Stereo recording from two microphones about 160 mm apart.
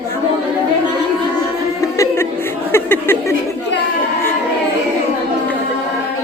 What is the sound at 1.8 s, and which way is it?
Chuckle, 15° left (ahead or behind).